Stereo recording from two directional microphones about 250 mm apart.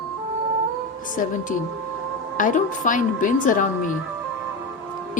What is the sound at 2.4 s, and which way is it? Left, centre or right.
A woman's voice, left.